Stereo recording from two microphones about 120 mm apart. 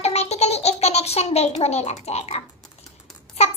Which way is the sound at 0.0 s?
60° left (ahead or behind).